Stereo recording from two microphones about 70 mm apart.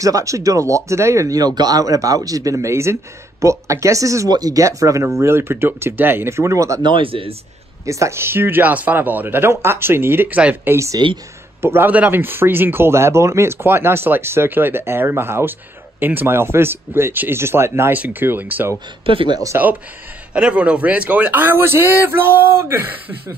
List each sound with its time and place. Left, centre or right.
0.0 s speech: right
1.4 s speech: right
4.3 s speech: right
5.0 s speech: right
7.8 s speech: right
18.2 s speech: right
20.3 s speech: centre